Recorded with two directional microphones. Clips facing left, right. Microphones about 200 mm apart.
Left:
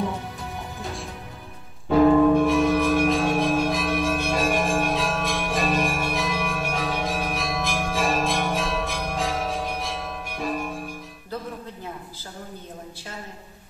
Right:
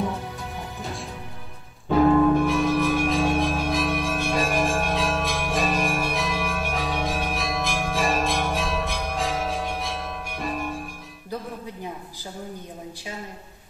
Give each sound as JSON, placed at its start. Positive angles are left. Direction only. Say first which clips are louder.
{"t": 2.3, "sound": "change ringing", "louder": "left 2 dB", "side_deg": 0}